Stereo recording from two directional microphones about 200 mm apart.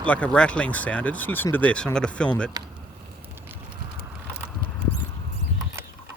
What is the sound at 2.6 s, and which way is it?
Speech, 20° right (ahead or behind).